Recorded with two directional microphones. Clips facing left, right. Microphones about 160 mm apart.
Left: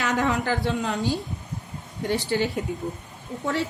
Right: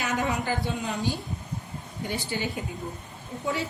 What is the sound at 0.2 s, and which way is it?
A woman's voice, 75° left (ahead or behind).